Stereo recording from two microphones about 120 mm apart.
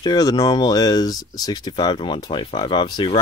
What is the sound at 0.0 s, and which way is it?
Speech, 35° left (ahead or behind).